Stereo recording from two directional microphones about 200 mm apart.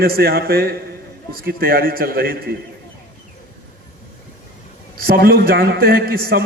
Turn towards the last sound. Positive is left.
turn(degrees=-50)  # may be behind; listen again after turning